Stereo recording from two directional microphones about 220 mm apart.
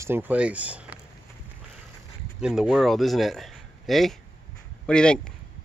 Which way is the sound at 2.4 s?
5° right (ahead or behind).